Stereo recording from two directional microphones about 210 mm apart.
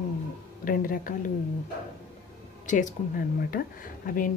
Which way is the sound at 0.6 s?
40° left (ahead or behind).